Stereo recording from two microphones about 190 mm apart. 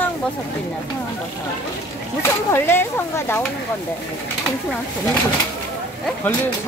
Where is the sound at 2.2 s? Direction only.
10° left (ahead or behind).